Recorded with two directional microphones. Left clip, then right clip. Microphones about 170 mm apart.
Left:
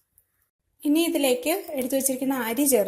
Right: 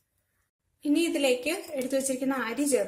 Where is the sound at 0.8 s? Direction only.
35° left (ahead or behind).